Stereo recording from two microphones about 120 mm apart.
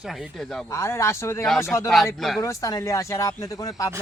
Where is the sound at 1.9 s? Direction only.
Centre (ahead or behind).